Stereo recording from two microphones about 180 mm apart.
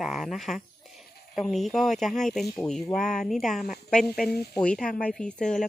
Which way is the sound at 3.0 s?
45° left (ahead or behind).